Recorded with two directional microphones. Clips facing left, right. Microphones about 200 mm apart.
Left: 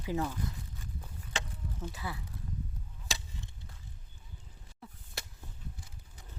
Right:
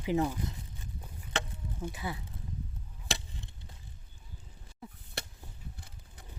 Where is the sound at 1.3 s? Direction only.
60° right (ahead or behind).